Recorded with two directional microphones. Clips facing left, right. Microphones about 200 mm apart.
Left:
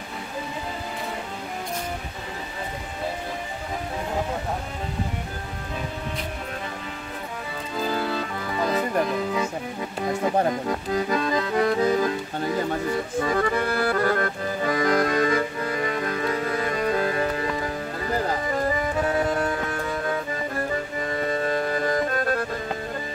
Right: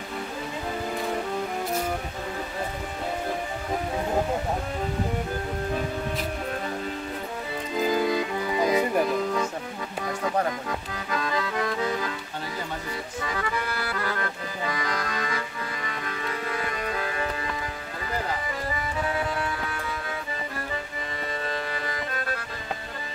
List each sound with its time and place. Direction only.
7.8 s music: 15° right (ahead or behind)
10.0 s accordion: 30° left (ahead or behind)
12.0 s accordion: 45° left (ahead or behind)
18.2 s music: 40° left (ahead or behind)
21.2 s music: 45° left (ahead or behind)